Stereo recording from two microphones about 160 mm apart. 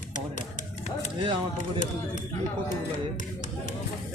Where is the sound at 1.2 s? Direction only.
30° right (ahead or behind).